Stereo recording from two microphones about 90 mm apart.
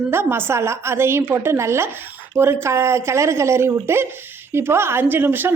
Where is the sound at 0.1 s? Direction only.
25° right (ahead or behind).